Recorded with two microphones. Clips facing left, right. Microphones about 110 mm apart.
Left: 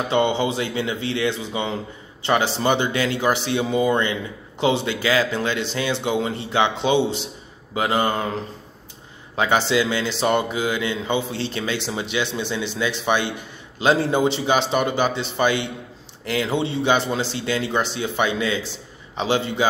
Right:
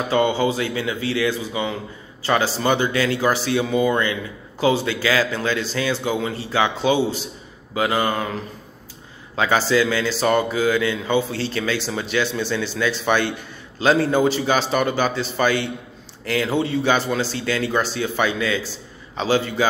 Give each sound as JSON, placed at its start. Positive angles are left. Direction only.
{"t": 0.1, "sound": "speech", "side_deg": 25}